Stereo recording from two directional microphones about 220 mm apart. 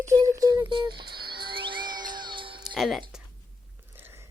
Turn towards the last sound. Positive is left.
turn(degrees=0)  # may be behind; listen again after turning